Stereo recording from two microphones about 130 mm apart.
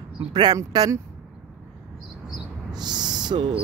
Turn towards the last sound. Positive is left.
turn(degrees=-40)  # may be behind; listen again after turning